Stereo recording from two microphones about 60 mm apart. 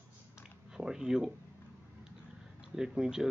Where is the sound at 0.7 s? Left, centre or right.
Centre.